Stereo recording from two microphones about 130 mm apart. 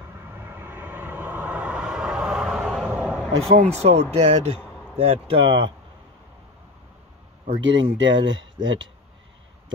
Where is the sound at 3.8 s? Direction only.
55° right (ahead or behind).